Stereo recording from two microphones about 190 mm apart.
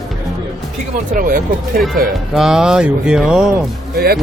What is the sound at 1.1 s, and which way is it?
Speech, 45° right (ahead or behind).